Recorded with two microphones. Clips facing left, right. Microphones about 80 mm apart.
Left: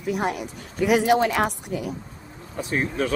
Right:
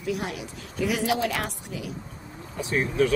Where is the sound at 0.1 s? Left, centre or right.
Left.